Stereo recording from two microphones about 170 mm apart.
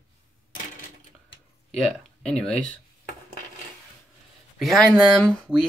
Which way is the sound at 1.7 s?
Centre (ahead or behind).